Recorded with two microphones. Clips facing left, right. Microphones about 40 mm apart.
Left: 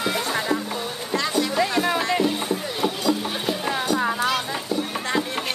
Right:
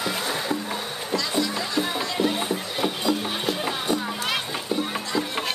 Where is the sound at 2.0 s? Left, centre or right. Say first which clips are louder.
Left 4 dB; left.